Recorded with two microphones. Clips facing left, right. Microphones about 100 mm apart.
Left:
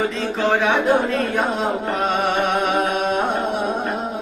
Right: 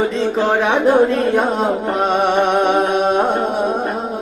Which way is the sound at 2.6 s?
40° right (ahead or behind).